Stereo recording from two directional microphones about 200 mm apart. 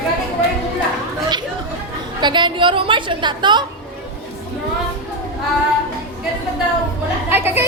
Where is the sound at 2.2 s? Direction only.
25° right (ahead or behind).